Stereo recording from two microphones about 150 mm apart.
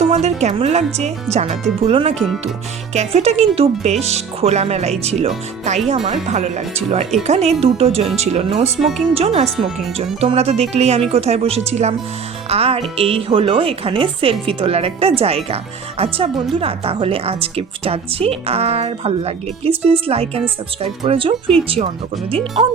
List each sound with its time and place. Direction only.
0.0 s speech: 45° right (ahead or behind)
2.1 s speech: centre (ahead or behind)
2.9 s speech: 45° right (ahead or behind)
9.6 s speech: centre (ahead or behind)
10.2 s speech: 45° right (ahead or behind)